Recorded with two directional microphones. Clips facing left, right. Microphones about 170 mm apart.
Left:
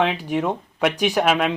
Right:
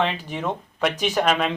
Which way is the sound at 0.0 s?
10° left (ahead or behind).